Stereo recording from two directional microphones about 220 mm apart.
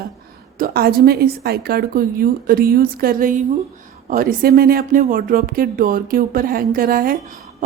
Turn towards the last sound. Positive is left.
turn(degrees=-40)  # may be behind; listen again after turning